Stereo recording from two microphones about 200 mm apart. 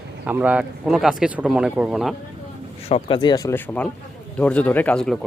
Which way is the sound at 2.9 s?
25° left (ahead or behind).